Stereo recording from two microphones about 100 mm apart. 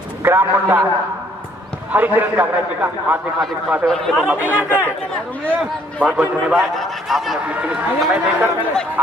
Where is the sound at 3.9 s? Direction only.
5° left (ahead or behind).